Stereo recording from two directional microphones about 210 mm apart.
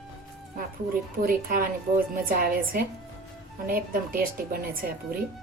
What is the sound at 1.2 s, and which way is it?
Speech, 40° right (ahead or behind).